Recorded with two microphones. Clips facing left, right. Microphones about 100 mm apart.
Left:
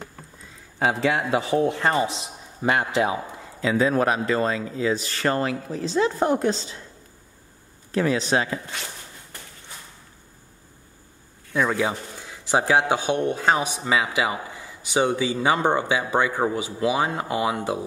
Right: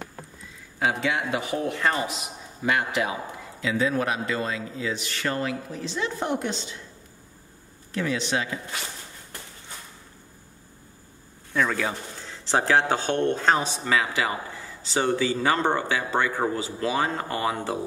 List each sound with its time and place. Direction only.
0.7 s a man's voice: 35° left (ahead or behind)
3.6 s speech: 40° left (ahead or behind)
7.9 s speech: 40° left (ahead or behind)
11.5 s a man's voice: 15° left (ahead or behind)